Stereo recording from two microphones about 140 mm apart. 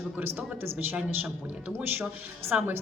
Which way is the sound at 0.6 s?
15° right (ahead or behind).